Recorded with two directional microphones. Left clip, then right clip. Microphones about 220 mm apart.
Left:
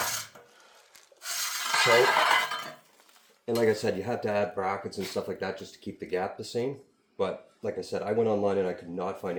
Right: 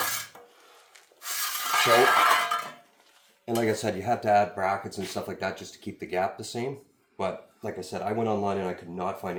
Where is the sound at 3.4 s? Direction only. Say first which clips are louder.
Left 1 dB; 20° right (ahead or behind).